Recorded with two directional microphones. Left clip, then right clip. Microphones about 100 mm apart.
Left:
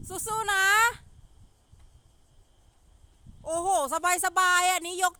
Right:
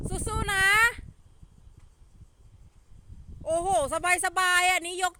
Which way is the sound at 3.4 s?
15° left (ahead or behind).